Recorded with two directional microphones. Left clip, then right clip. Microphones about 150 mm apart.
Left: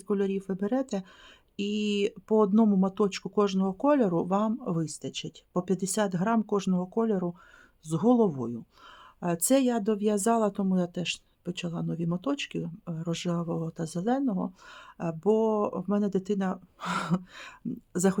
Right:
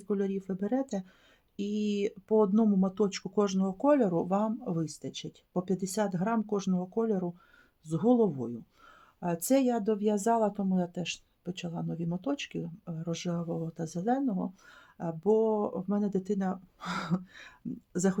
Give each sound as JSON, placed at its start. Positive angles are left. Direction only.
{"t": 0.1, "sound": "speech", "side_deg": 30}